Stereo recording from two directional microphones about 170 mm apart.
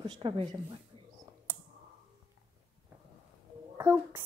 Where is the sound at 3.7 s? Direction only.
15° right (ahead or behind).